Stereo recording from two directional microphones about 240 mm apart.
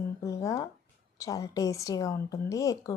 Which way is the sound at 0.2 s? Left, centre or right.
Centre.